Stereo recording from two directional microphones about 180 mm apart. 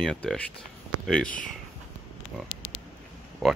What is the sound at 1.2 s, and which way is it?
Speech, 50° left (ahead or behind).